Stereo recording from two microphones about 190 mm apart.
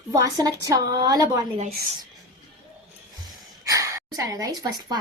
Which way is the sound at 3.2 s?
15° right (ahead or behind).